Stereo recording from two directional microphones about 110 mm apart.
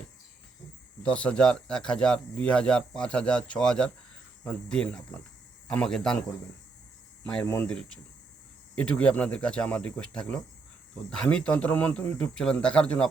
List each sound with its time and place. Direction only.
1.0 s speech: 10° left (ahead or behind)
7.4 s speech: 25° left (ahead or behind)
7.7 s speech: 5° left (ahead or behind)